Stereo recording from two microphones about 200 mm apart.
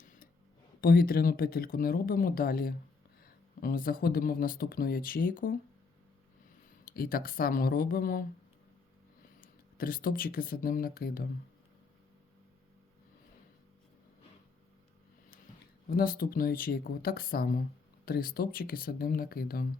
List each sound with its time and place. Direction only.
0.0 s a sound: 40° left (ahead or behind)
0.8 s speech: 50° left (ahead or behind)
6.8 s speech: 45° left (ahead or behind)
9.4 s speech: 45° left (ahead or behind)
15.9 s speech: 50° left (ahead or behind)